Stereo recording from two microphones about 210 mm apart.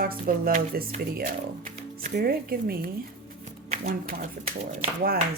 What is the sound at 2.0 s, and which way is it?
Speech, 45° right (ahead or behind).